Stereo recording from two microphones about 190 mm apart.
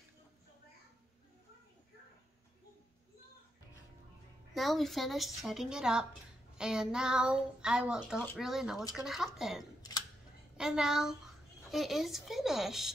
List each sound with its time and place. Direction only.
4.6 s speech: centre (ahead or behind)
9.8 s scissors: 20° left (ahead or behind)
10.6 s speech: 5° right (ahead or behind)